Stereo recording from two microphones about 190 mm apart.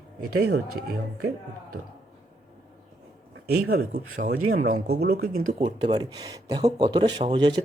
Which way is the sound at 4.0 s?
45° right (ahead or behind).